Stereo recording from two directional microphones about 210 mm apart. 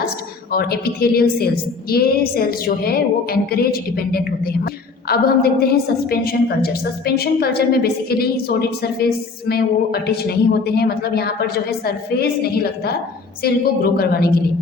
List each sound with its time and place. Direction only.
0.5 s a woman's voice: 45° left (ahead or behind)